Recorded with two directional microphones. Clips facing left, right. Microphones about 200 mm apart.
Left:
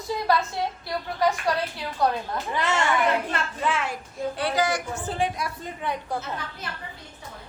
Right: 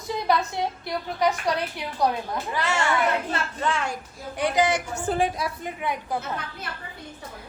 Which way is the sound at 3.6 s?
Centre (ahead or behind).